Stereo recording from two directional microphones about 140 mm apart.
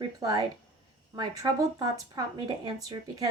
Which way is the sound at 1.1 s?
30° right (ahead or behind).